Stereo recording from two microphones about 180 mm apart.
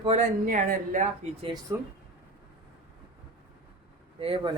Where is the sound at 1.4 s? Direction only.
20° right (ahead or behind).